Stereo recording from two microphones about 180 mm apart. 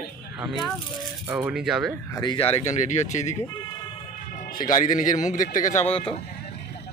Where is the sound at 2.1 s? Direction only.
25° left (ahead or behind).